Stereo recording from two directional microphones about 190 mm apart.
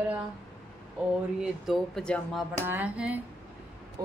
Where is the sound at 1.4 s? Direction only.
Centre (ahead or behind).